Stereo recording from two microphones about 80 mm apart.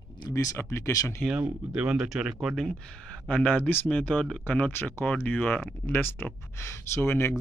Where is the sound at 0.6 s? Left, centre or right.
Left.